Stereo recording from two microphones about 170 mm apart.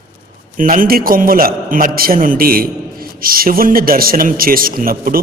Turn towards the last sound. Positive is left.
turn(degrees=-60)  # may be behind; listen again after turning